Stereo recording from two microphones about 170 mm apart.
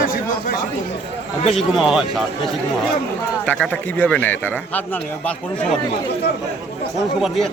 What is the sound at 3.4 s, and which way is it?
Speech, 10° left (ahead or behind).